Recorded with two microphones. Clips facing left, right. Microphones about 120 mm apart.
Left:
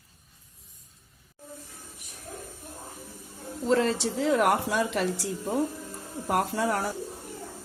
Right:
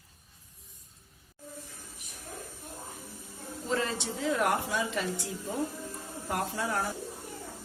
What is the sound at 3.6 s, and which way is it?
Speech, 80° left.